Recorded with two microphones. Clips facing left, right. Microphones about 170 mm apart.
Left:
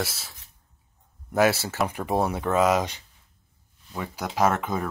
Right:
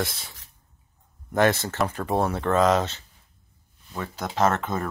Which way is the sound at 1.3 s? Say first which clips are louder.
Even; 5° left (ahead or behind).